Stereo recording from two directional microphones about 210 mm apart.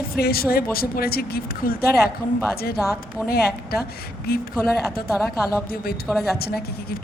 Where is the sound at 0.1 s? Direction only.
45° left (ahead or behind).